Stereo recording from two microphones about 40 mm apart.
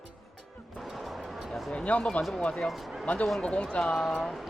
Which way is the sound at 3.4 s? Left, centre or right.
Left.